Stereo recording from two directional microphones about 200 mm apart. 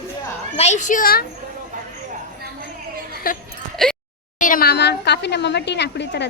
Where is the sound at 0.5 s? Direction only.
35° left (ahead or behind).